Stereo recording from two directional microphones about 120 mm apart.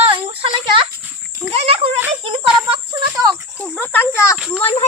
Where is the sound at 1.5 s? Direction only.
55° right (ahead or behind).